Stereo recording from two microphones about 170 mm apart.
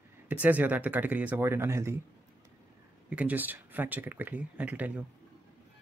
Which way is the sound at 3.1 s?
10° right (ahead or behind).